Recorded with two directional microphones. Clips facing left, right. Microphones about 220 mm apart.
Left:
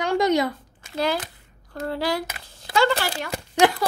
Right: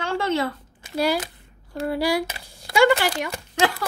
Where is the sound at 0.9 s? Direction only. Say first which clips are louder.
Right 2 dB; 10° right (ahead or behind).